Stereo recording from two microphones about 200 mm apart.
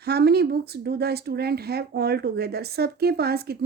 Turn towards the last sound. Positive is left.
turn(degrees=-50)  # may be behind; listen again after turning